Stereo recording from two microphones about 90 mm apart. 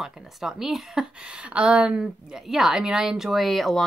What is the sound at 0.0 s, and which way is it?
A woman's voice, 5° right (ahead or behind).